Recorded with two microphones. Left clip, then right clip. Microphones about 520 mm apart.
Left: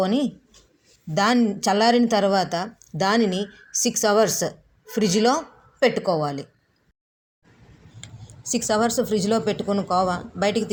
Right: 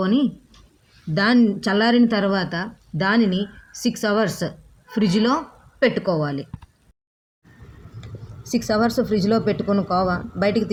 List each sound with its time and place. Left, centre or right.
1.1 s a woman's voice: right
8.0 s a woman's voice: right